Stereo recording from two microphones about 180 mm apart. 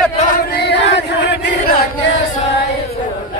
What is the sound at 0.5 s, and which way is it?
Chant, 65° left (ahead or behind).